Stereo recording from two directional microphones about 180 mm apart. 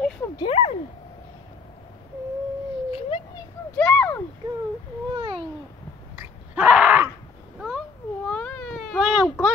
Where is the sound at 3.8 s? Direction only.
5° left (ahead or behind).